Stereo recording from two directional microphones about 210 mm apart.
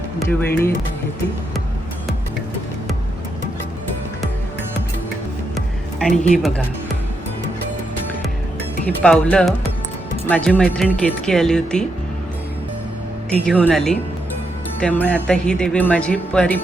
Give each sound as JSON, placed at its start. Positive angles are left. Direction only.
{"t": 0.3, "sound": "speech", "side_deg": 10}
{"t": 5.5, "sound": "music", "side_deg": 0}
{"t": 8.9, "sound": "speech", "side_deg": 5}
{"t": 13.4, "sound": "speech", "side_deg": 5}